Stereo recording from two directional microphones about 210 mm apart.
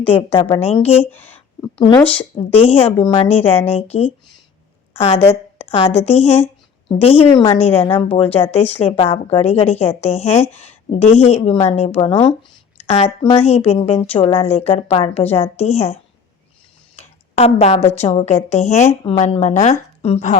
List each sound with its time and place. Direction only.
0.0 s a woman's voice: 25° left (ahead or behind)
2.1 s a woman's voice: 25° left (ahead or behind)
17.0 s a woman's voice: 30° left (ahead or behind)